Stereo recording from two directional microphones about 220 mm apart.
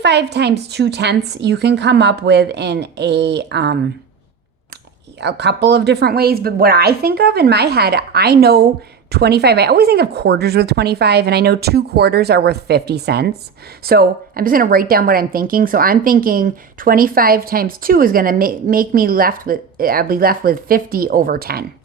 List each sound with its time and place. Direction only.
0.0 s speech: 50° right (ahead or behind)
5.2 s a woman's voice: 50° right (ahead or behind)